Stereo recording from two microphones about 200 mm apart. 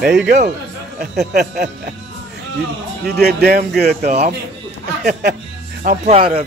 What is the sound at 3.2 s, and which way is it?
Speech, 50° right (ahead or behind).